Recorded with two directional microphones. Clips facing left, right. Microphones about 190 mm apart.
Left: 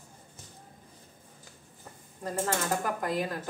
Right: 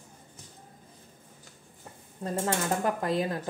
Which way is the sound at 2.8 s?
25° right (ahead or behind).